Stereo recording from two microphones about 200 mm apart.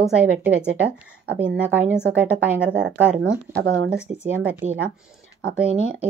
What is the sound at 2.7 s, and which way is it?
Speech, 60° right (ahead or behind).